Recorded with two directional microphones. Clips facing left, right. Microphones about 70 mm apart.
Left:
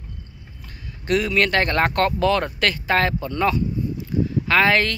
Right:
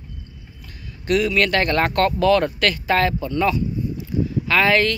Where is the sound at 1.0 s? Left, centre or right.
Left.